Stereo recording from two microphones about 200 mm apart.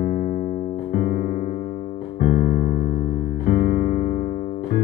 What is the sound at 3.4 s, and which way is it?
Music, 45° left (ahead or behind).